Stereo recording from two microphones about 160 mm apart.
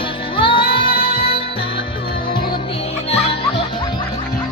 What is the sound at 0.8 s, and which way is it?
Music, 65° left (ahead or behind).